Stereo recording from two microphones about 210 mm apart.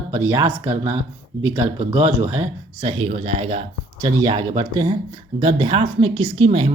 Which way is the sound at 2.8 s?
25° right (ahead or behind).